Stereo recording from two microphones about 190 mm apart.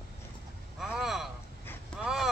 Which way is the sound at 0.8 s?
Centre (ahead or behind).